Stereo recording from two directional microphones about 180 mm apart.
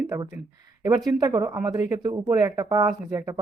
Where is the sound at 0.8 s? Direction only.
20° right (ahead or behind).